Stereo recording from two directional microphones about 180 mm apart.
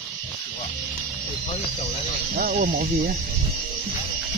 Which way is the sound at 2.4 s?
50° right (ahead or behind).